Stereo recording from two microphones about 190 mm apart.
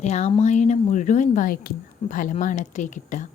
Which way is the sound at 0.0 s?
35° left (ahead or behind).